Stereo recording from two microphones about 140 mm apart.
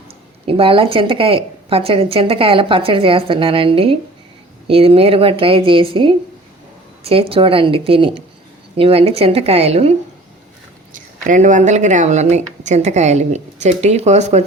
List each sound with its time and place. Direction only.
0.4 s a woman's voice: 40° right (ahead or behind)
10.9 s speech: 65° right (ahead or behind)